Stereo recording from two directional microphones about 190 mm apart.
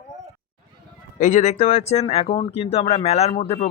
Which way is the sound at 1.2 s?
40° left (ahead or behind).